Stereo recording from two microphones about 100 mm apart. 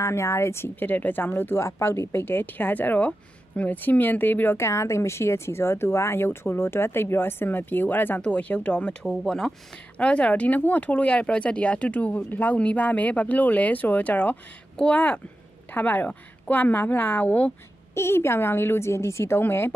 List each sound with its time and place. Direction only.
0.0 s speech: 30° left (ahead or behind)